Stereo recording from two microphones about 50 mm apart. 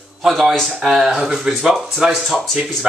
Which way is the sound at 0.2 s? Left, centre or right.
Centre.